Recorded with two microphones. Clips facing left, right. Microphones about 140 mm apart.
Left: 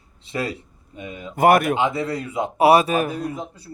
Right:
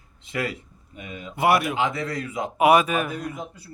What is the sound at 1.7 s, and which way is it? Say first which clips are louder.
A man's voice: left 3 dB; 30° left (ahead or behind).